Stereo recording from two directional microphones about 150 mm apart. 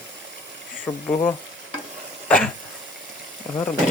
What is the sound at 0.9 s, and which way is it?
Speech, 15° left (ahead or behind).